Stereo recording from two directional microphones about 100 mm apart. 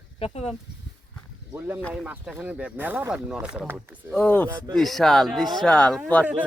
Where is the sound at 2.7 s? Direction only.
20° right (ahead or behind).